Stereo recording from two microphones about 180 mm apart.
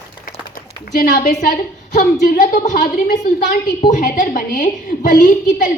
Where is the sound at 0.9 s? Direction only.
45° left (ahead or behind).